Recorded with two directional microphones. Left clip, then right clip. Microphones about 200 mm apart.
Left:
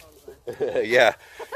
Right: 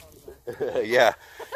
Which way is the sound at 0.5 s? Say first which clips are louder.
Left 2 dB; 5° right (ahead or behind).